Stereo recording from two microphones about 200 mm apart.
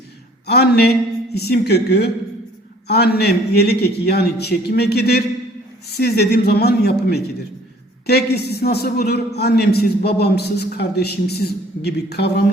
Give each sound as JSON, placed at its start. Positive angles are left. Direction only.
{"t": 0.4, "sound": "a man's voice", "side_deg": 55}